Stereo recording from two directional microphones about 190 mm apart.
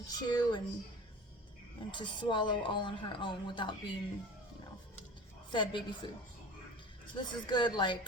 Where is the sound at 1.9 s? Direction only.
25° left (ahead or behind).